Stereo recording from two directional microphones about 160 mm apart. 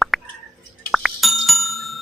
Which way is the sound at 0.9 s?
Centre (ahead or behind).